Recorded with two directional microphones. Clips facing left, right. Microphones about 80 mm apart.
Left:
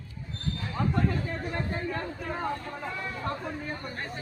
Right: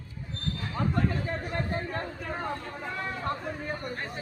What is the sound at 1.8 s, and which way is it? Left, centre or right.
Speech, right.